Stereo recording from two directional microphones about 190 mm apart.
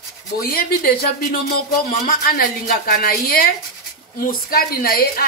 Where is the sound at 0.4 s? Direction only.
50° left (ahead or behind).